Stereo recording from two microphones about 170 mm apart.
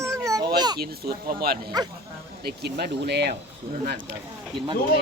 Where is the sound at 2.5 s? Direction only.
70° right (ahead or behind).